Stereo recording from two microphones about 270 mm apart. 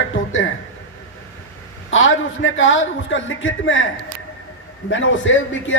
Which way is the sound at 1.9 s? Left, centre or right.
Left.